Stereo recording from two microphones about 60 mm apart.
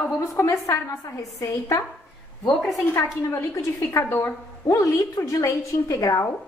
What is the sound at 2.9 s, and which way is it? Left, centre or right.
A woman's voice, left.